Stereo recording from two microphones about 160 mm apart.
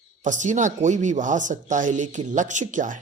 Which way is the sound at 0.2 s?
50° right (ahead or behind).